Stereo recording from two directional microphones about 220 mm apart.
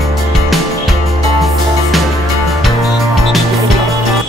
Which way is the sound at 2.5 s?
Centre (ahead or behind).